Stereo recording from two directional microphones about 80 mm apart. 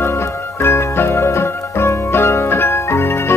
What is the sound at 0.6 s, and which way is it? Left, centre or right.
Music, left.